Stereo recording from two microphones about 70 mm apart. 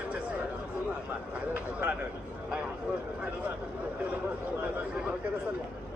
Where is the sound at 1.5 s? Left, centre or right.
Right.